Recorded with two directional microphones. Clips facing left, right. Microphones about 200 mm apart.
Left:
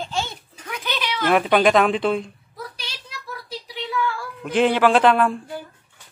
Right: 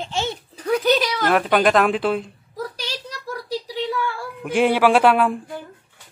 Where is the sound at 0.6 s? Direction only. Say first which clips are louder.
Right 11 dB; 40° right (ahead or behind).